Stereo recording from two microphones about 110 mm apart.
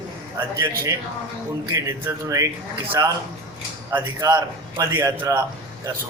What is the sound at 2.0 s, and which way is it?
A man's voice, 30° right (ahead or behind).